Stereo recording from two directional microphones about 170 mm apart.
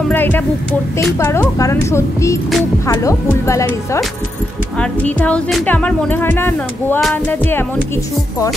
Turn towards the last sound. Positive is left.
turn(degrees=10)  # may be behind; listen again after turning